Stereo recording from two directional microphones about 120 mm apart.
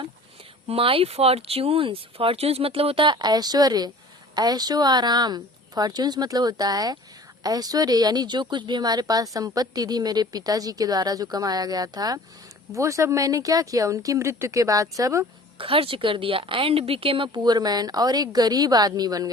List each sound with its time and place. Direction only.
0.7 s speech: 50° right (ahead or behind); by 15.3 s 25° right (ahead or behind)
15.5 s speech: 50° right (ahead or behind); by 19.3 s 30° right (ahead or behind)